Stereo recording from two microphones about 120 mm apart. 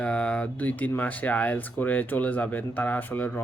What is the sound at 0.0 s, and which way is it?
Speech, 10° left (ahead or behind).